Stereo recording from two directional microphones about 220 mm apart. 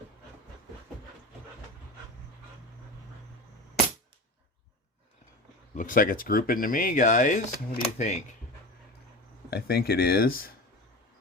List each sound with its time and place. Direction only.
5.7 s speech: 40° left (ahead or behind)
9.5 s speech: 45° left (ahead or behind)